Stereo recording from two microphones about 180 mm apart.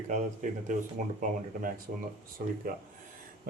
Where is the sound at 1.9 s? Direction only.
55° right (ahead or behind).